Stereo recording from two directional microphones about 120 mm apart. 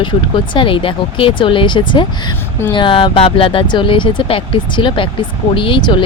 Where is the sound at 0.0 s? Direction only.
45° left (ahead or behind).